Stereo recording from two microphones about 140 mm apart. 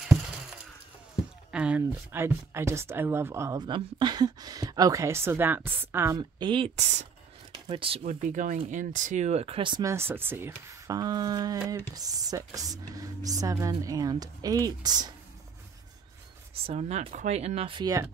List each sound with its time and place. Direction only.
1.5 s speech: 10° right (ahead or behind)
3.6 s speech: 35° right (ahead or behind); by 6.1 s 15° right (ahead or behind)
6.1 s speech: 35° right (ahead or behind)
8.0 s speech: 65° right (ahead or behind); by 9.8 s 35° right (ahead or behind)
9.8 s speech: 15° right (ahead or behind)
16.6 s speech: 50° right (ahead or behind)